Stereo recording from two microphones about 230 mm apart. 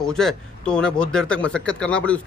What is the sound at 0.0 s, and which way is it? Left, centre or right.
Speech, centre.